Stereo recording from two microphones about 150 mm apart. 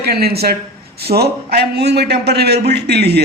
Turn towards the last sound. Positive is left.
turn(degrees=-90)